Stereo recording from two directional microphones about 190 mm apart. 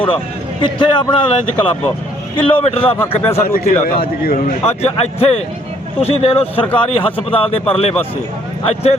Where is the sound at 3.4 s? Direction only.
50° left (ahead or behind).